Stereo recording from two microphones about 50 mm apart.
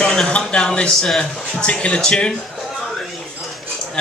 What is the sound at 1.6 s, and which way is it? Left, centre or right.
Speech, left.